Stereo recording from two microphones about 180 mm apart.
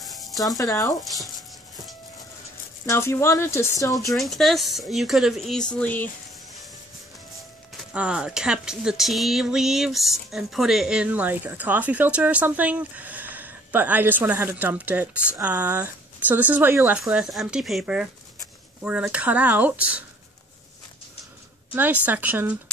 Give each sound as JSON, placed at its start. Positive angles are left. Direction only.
{"t": 0.0, "sound": "a sound", "side_deg": 0}
{"t": 0.6, "sound": "speech", "side_deg": 20}
{"t": 1.0, "sound": "speech", "side_deg": 0}
{"t": 2.9, "sound": "speech", "side_deg": 15}
{"t": 3.9, "sound": "speech", "side_deg": 0}
{"t": 7.9, "sound": "speech", "side_deg": -5}
{"t": 21.7, "sound": "speech", "side_deg": -10}